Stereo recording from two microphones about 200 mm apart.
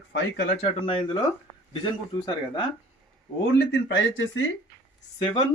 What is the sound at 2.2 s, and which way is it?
Speech, 20° left (ahead or behind).